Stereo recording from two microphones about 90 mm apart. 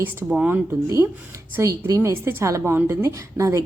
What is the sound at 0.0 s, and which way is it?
Speech, 20° right (ahead or behind).